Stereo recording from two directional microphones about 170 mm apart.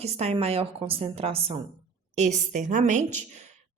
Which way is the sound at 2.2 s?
45° right (ahead or behind).